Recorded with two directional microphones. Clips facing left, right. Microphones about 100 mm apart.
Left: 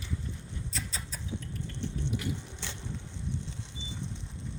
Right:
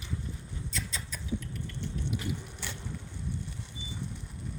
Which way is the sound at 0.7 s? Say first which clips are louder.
Right 2 dB; 35° left (ahead or behind).